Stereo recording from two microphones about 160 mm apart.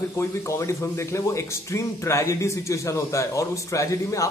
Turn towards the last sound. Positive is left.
turn(degrees=20)  # may be behind; listen again after turning